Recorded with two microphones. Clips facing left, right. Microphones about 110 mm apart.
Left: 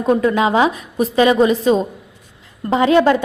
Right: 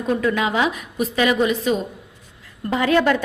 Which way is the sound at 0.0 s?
30° left (ahead or behind).